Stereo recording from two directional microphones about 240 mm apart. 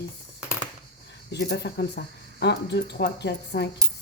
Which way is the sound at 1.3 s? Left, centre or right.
Left.